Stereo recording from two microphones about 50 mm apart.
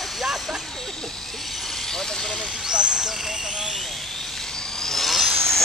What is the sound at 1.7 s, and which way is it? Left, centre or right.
Vehicle, centre.